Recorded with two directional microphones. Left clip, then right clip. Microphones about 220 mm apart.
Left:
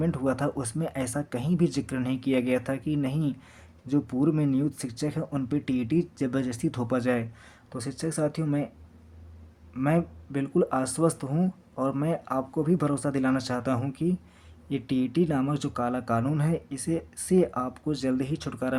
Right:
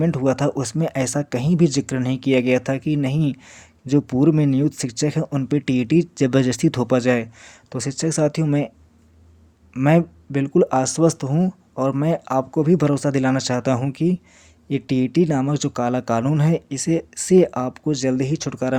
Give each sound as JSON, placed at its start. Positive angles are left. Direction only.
{"t": 0.0, "sound": "speech", "side_deg": -30}
{"t": 9.7, "sound": "speech", "side_deg": -30}